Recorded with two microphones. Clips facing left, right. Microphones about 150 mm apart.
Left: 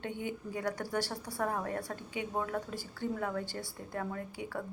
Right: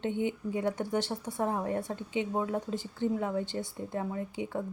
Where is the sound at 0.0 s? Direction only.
20° right (ahead or behind).